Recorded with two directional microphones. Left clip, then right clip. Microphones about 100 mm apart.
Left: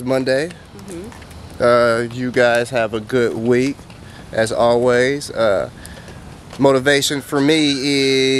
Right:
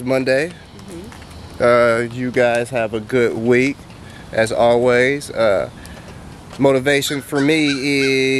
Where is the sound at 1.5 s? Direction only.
5° left (ahead or behind).